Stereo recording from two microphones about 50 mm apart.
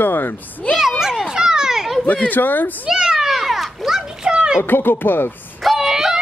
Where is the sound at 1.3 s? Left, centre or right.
Centre.